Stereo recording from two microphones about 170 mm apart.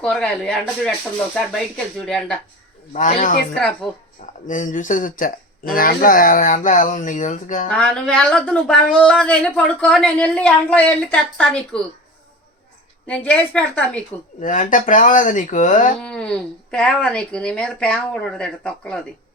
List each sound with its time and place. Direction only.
0.0 s speech: 5° left (ahead or behind)
2.9 s speech: 50° left (ahead or behind)
4.4 s speech: 50° left (ahead or behind)
7.7 s speech: 5° left (ahead or behind)
13.1 s a woman's voice: 5° left (ahead or behind)
14.4 s speech: 50° left (ahead or behind)
16.0 s a sound: 5° left (ahead or behind)
16.7 s speech: 5° left (ahead or behind)